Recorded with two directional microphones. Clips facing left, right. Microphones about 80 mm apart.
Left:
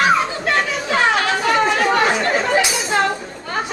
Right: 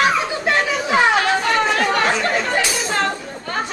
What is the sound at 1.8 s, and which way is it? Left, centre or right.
Chatter, centre.